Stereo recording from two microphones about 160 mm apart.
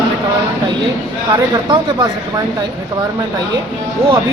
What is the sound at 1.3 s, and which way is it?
Speech, 25° right (ahead or behind).